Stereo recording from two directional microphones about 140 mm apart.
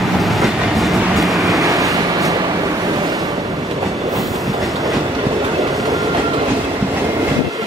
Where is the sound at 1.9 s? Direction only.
25° right (ahead or behind).